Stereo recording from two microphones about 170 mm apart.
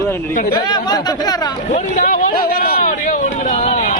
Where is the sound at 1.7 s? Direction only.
45° left (ahead or behind).